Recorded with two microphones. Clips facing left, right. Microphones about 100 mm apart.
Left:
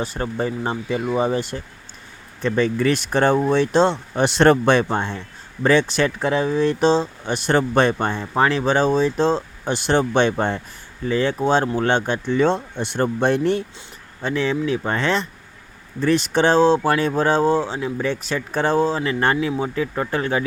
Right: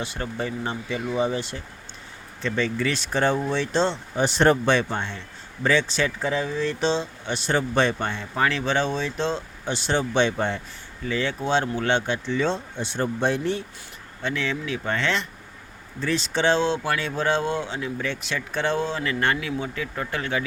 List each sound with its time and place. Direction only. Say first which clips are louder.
0.0 s speech: left 5 dB; 40° left (ahead or behind); by 4.5 s 75° left (ahead or behind)
4.6 s speech: left 5 dB; 45° left (ahead or behind)
5.6 s speech: left 5 dB; 55° left (ahead or behind); by 9.7 s 40° left (ahead or behind)
9.7 s speech: left 5 dB; 50° left (ahead or behind)
14.2 s speech: left 6 dB; 35° left (ahead or behind)
16.0 s speech: left 7 dB; 55° left (ahead or behind); by 20.4 s 35° left (ahead or behind)